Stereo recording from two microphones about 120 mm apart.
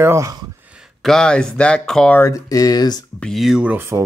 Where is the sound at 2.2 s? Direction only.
25° left (ahead or behind).